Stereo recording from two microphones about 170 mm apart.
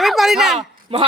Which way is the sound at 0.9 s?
35° right (ahead or behind).